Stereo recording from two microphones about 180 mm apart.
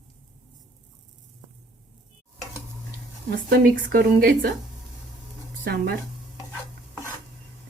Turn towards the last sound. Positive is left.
turn(degrees=15)  # may be behind; listen again after turning